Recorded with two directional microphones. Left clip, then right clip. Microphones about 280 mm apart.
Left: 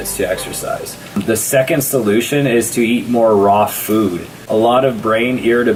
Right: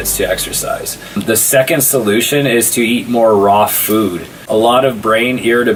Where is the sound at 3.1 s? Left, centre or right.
Centre.